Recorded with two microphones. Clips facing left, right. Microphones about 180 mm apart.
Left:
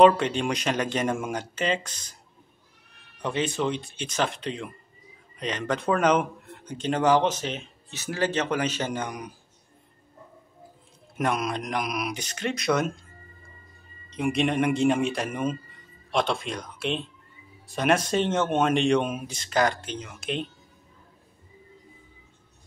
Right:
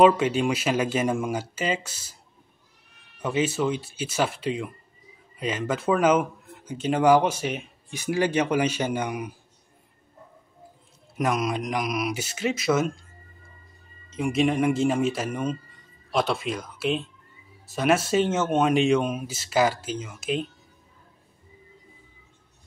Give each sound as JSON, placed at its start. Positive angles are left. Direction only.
{"t": 0.0, "sound": "speech", "side_deg": -5}
{"t": 3.2, "sound": "speech", "side_deg": -5}
{"t": 11.1, "sound": "speech", "side_deg": 0}
{"t": 14.1, "sound": "speech", "side_deg": 0}